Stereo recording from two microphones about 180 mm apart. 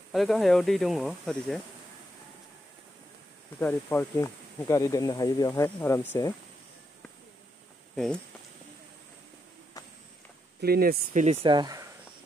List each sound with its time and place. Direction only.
0.1 s speech: centre (ahead or behind)
3.5 s speech: 10° left (ahead or behind)
7.9 s speech: 5° left (ahead or behind)
10.6 s speech: 60° right (ahead or behind)
11.4 s speech: 25° right (ahead or behind)